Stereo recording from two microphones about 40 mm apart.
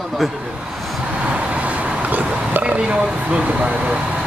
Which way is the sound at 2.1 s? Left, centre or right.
Right.